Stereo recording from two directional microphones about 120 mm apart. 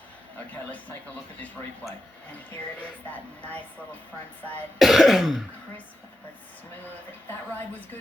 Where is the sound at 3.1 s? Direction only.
15° left (ahead or behind).